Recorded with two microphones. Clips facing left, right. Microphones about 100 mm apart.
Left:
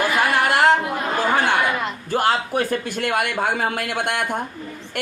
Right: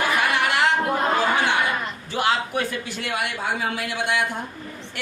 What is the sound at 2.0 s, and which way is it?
Speech, 45° left (ahead or behind).